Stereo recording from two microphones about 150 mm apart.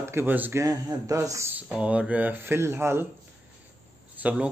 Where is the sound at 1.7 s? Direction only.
10° right (ahead or behind).